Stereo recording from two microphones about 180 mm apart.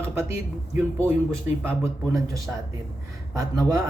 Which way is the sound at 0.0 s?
15° right (ahead or behind).